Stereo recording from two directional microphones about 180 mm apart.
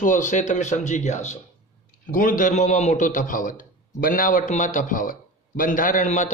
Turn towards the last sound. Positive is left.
turn(degrees=40)  # may be behind; listen again after turning